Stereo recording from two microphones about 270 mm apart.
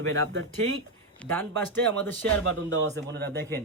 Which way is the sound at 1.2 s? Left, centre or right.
Centre.